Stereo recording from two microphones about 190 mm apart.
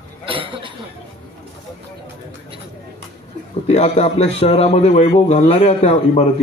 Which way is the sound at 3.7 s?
35° left (ahead or behind).